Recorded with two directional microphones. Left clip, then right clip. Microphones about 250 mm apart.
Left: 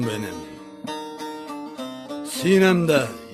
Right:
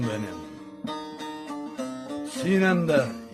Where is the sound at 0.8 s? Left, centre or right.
Centre.